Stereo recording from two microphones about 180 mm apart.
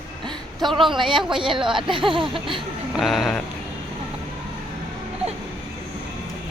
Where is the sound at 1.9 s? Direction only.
30° right (ahead or behind).